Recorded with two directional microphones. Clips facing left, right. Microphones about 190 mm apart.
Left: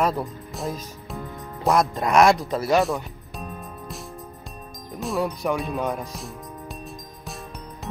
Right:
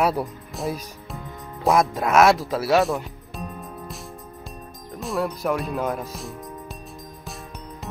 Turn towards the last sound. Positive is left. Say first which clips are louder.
# right 1 dB
turn(degrees=0)  # may be behind; listen again after turning